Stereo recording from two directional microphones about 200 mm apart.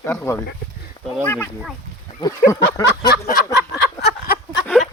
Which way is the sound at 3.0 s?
50° left (ahead or behind).